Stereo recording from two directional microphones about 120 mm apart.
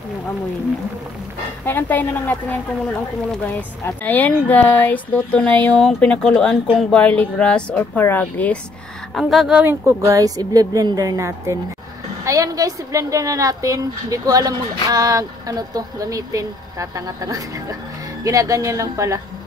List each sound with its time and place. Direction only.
1.7 s speech: 15° left (ahead or behind)
9.1 s speech: centre (ahead or behind)
9.6 s a woman's voice: 20° right (ahead or behind)